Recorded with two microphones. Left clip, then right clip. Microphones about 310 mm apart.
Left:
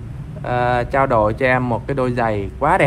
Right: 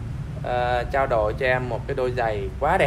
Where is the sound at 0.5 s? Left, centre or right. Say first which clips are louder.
Left 5 dB; centre.